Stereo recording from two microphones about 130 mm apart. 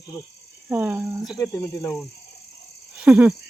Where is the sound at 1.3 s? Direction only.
25° left (ahead or behind).